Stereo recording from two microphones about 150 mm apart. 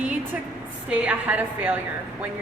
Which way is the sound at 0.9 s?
10° right (ahead or behind).